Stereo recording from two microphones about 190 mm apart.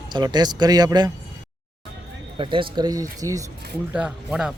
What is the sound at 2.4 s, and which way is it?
Speech, 25° right (ahead or behind).